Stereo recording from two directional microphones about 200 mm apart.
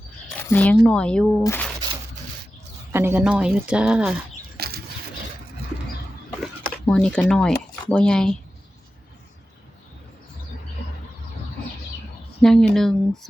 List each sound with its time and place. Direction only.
0.3 s a sound: 10° left (ahead or behind)
0.8 s speech: 5° left (ahead or behind)
2.9 s speech: 10° right (ahead or behind)
4.6 s a sound: 50° right (ahead or behind)
6.4 s speech: centre (ahead or behind)
12.4 s speech: 5° left (ahead or behind)